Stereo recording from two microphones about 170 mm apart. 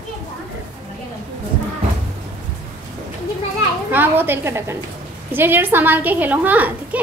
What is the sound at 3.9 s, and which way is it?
A woman's voice, 10° right (ahead or behind).